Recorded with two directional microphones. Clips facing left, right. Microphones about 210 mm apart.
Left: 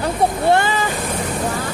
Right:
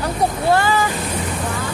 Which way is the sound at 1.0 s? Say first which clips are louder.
Left 2 dB; 50° left (ahead or behind).